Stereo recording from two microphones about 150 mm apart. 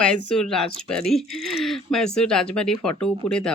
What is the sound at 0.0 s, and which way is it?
Speech, 5° left (ahead or behind).